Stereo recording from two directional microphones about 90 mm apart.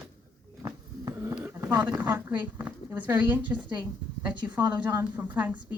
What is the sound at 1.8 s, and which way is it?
A woman's voice, 15° right (ahead or behind).